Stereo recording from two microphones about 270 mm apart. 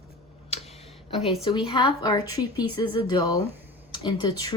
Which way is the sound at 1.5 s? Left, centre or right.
Centre.